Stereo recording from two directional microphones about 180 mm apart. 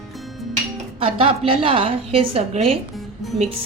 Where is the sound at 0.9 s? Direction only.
30° right (ahead or behind).